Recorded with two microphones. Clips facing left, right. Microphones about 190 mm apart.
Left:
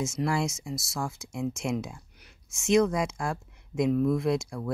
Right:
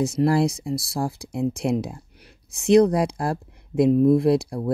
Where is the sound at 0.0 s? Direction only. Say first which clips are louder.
Right 8 dB; 35° right (ahead or behind).